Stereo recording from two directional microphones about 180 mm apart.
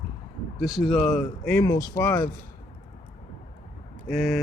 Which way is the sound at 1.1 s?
10° left (ahead or behind).